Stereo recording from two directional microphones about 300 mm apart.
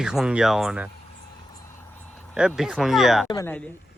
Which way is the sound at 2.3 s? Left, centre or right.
Centre.